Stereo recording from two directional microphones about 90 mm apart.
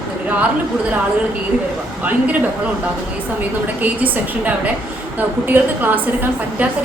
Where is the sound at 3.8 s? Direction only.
15° right (ahead or behind).